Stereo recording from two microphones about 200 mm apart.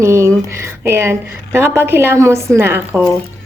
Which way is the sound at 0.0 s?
15° right (ahead or behind).